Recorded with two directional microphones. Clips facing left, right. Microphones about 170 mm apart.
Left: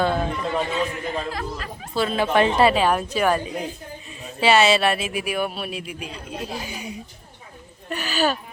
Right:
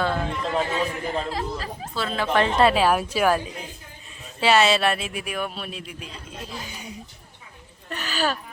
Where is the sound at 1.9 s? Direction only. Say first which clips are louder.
Left 3 dB; 15° left (ahead or behind).